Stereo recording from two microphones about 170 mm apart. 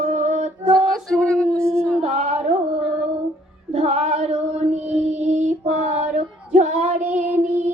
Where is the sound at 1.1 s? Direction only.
5° left (ahead or behind).